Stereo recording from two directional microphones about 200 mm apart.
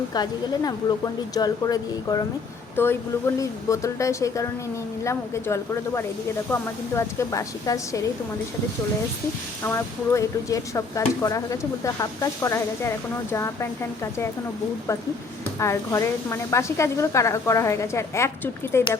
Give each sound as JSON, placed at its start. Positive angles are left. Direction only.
{"t": 0.1, "sound": "a woman's voice", "side_deg": 20}
{"t": 9.6, "sound": "a woman's voice", "side_deg": 10}
{"t": 15.5, "sound": "a woman's voice", "side_deg": 15}